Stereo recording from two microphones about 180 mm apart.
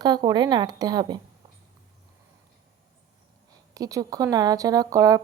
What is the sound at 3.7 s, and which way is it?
A woman's voice, 20° right (ahead or behind).